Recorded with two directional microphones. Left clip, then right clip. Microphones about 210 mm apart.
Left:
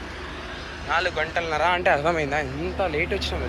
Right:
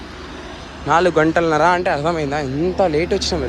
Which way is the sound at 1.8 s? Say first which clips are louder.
Right 2 dB; 15° right (ahead or behind).